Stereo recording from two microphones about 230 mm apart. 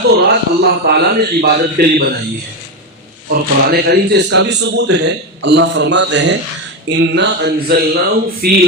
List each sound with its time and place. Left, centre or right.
0.2 s speech: right
3.2 s speech: right